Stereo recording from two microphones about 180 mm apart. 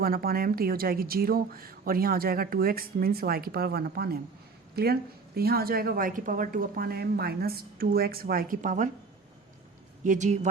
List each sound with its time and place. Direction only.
0.0 s speech: 55° right (ahead or behind)
10.0 s speech: 45° right (ahead or behind)